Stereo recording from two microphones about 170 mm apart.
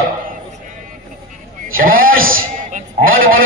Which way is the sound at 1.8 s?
55° right (ahead or behind).